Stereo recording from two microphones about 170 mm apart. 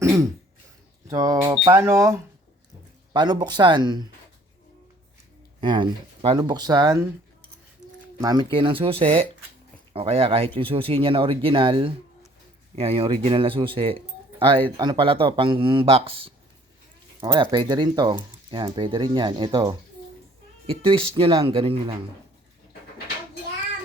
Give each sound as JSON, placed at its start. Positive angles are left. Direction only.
{"t": 0.0, "sound": "throat clearing", "side_deg": -15}
{"t": 1.0, "sound": "speech", "side_deg": -20}
{"t": 5.5, "sound": "speech", "side_deg": -25}
{"t": 8.2, "sound": "speech", "side_deg": -25}